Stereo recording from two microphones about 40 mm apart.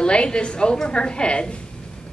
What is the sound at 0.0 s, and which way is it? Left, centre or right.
A woman's voice, left.